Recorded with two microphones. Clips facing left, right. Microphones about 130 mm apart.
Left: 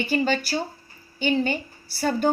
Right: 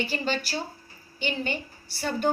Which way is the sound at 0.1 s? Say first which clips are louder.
Left 6 dB; 50° left (ahead or behind).